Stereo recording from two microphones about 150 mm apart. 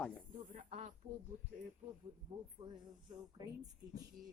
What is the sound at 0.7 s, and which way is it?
Speech, 45° right (ahead or behind).